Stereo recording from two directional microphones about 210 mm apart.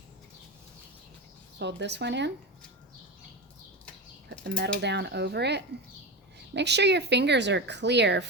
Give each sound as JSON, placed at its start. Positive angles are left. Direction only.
{"t": 1.5, "sound": "speech", "side_deg": -55}
{"t": 4.4, "sound": "speech", "side_deg": -55}